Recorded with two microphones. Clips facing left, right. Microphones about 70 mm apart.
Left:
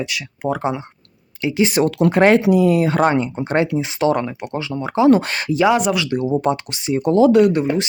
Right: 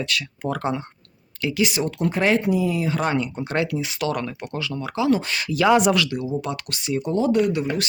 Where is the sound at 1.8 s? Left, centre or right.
Left.